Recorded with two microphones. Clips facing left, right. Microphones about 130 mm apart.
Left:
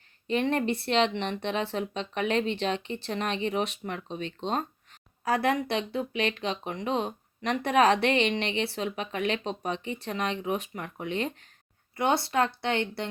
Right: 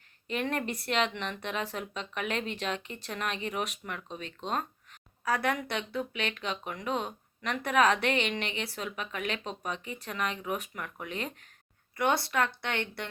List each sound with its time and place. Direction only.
0.4 s speech: 30° left (ahead or behind)